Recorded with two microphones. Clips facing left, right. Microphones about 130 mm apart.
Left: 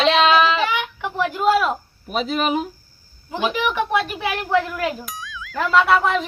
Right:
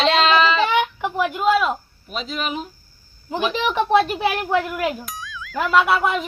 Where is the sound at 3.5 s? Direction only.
25° right (ahead or behind).